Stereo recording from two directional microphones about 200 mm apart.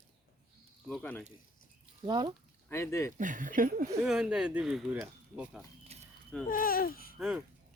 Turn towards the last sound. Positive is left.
turn(degrees=-5)  # may be behind; listen again after turning